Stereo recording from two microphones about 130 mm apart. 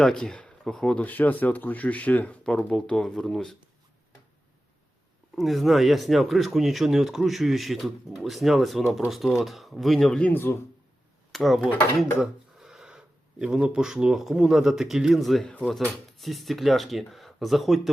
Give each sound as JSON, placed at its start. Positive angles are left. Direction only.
{"t": 0.0, "sound": "speech", "side_deg": 5}
{"t": 5.3, "sound": "speech", "side_deg": 0}
{"t": 11.3, "sound": "speech", "side_deg": 0}